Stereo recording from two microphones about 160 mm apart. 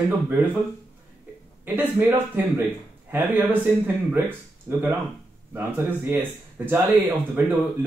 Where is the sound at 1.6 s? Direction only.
10° right (ahead or behind).